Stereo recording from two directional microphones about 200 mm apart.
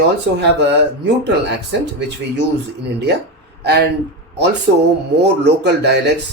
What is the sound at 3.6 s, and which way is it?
Speech, 55° right (ahead or behind).